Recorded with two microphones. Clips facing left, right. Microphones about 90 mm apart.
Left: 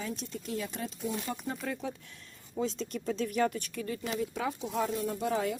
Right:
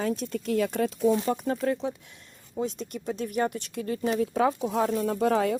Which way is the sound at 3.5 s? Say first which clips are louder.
Right 5 dB; 45° right (ahead or behind).